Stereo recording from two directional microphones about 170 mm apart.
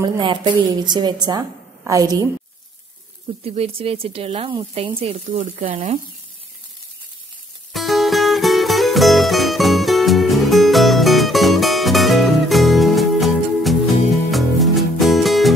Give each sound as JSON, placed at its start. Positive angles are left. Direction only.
{"t": 0.0, "sound": "a woman's voice", "side_deg": -25}
{"t": 3.4, "sound": "speech", "side_deg": -35}
{"t": 5.3, "sound": "speech", "side_deg": -50}
{"t": 7.7, "sound": "music", "side_deg": 0}